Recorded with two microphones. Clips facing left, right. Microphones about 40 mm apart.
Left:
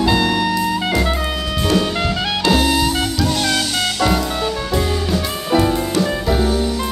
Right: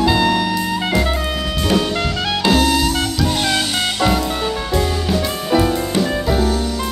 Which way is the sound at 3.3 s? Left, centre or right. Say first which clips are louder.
Even; centre.